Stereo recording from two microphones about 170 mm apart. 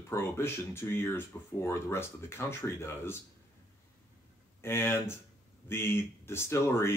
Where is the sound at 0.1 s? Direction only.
15° left (ahead or behind).